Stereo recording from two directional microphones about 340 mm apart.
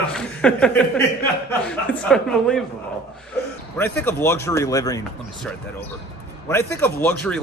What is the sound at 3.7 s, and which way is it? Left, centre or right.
Speech, centre.